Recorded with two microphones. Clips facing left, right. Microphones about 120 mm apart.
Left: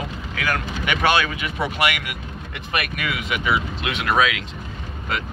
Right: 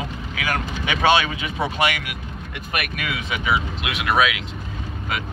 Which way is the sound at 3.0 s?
25° right (ahead or behind).